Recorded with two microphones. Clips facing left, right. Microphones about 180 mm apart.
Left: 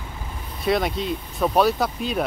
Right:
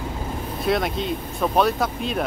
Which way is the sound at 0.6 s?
Centre (ahead or behind).